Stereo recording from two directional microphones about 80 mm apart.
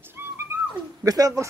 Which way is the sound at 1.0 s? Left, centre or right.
Right.